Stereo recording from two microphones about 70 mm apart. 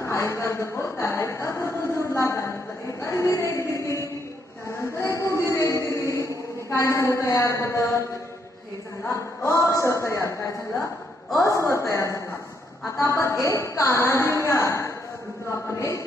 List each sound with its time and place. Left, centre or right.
0.0 s speech: left
4.7 s chant: left
9.0 s speech: left